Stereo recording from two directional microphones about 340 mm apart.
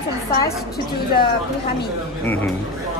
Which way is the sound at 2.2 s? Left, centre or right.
Centre.